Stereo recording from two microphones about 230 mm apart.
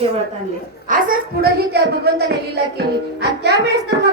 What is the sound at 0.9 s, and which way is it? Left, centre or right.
A woman's voice, right.